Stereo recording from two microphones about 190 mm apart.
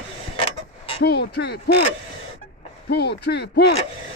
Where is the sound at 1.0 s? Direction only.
60° left (ahead or behind).